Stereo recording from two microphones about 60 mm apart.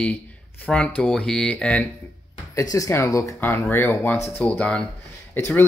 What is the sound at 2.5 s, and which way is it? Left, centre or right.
Speech, left.